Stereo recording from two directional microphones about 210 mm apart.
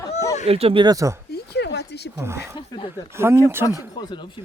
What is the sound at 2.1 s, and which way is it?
Speech, 10° right (ahead or behind).